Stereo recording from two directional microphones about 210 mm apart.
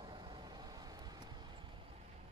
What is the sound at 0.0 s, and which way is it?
Vehicle, 20° right (ahead or behind).